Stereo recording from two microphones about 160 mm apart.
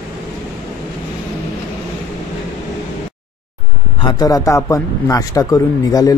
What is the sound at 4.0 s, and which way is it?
Speech, 25° left (ahead or behind).